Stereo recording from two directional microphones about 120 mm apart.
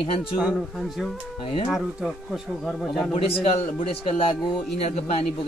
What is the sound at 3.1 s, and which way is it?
A man's voice, 50° left (ahead or behind).